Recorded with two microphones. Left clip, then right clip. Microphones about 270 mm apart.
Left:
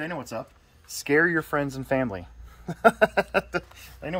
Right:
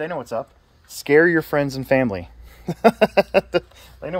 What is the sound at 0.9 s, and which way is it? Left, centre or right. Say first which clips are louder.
Speech: right 7 dB; right.